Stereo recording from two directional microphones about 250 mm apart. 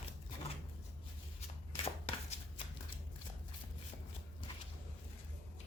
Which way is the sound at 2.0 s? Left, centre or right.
Left.